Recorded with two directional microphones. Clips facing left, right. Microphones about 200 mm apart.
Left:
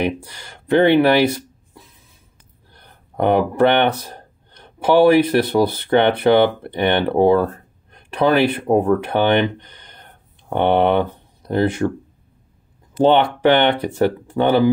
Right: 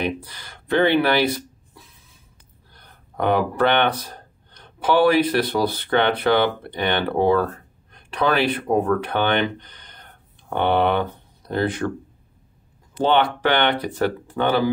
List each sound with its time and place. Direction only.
0.0 s speech: 25° left (ahead or behind)
3.2 s speech: 20° left (ahead or behind)
13.0 s speech: 25° left (ahead or behind)